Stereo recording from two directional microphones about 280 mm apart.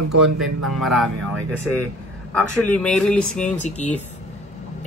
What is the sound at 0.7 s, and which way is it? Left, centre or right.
Speech, centre.